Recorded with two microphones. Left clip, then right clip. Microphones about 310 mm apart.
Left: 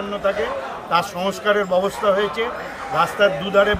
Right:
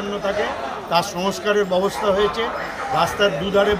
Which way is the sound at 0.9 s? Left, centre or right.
Centre.